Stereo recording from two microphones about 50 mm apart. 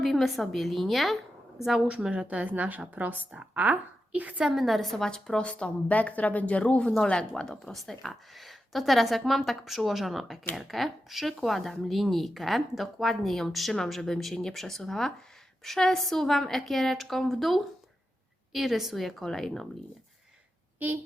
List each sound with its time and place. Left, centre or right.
0.0 s a woman's voice: centre
1.9 s a woman's voice: right
4.5 s a woman's voice: centre
5.5 s a woman's voice: left
7.6 s speech: centre
20.7 s a woman's voice: right